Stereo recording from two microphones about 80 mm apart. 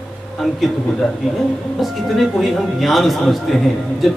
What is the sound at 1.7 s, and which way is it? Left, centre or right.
A woman's voice, centre.